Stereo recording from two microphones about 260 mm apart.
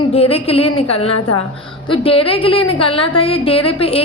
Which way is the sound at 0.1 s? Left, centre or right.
Left.